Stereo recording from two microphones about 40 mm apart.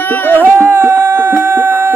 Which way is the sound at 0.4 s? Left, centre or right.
Right.